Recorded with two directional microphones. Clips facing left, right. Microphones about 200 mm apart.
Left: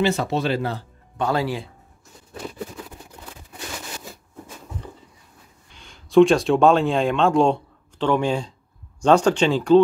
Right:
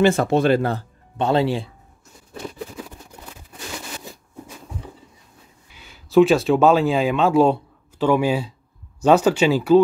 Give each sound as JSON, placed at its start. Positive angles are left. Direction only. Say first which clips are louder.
{"t": 0.0, "sound": "speech", "louder": "right 5 dB", "side_deg": -50}
{"t": 1.1, "sound": "speech", "louder": "right 4 dB", "side_deg": -25}
{"t": 5.7, "sound": "speech", "louder": "right 1 dB", "side_deg": -5}